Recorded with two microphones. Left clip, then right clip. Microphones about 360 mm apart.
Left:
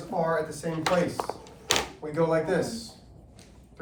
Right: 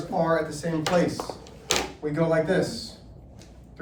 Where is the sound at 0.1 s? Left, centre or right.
Centre.